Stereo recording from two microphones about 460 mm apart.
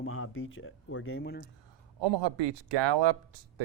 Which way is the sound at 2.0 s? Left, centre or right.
Right.